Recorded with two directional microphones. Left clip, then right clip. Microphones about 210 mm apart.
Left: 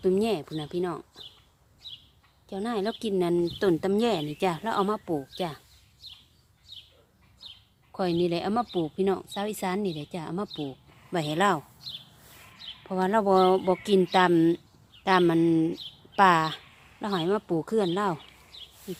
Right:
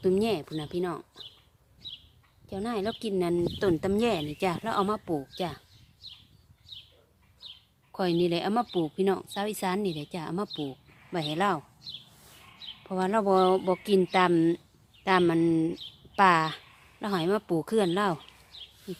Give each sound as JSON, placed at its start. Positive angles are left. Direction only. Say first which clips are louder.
{"t": 0.0, "sound": "a woman's voice", "louder": "left 1 dB", "side_deg": 0}
{"t": 2.5, "sound": "a woman's voice", "louder": "left 2 dB", "side_deg": 5}
{"t": 7.9, "sound": "a woman's voice", "louder": "even", "side_deg": -5}
{"t": 11.1, "sound": "a woman's voice", "louder": "left 3 dB", "side_deg": 10}